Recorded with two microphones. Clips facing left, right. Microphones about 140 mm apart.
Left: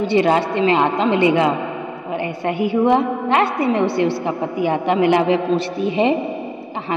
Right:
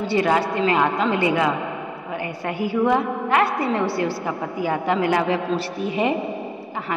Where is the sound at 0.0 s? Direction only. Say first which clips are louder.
Left 4 dB; 20° left (ahead or behind).